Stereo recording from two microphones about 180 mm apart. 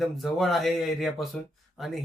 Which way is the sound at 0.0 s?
Centre (ahead or behind).